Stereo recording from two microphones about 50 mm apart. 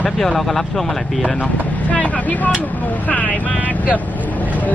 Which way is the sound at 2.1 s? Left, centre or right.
Left.